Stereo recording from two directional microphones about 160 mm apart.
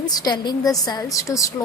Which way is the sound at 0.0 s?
25° left (ahead or behind).